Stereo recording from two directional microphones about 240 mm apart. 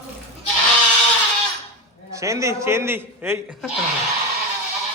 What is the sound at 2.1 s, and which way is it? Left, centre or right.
A man's voice, centre.